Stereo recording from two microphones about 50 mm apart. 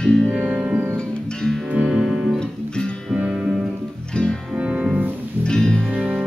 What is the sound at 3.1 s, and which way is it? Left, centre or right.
Music, right.